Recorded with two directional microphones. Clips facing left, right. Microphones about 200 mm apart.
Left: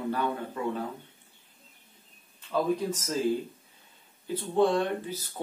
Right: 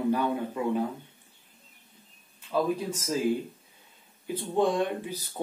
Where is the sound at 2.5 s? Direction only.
10° right (ahead or behind).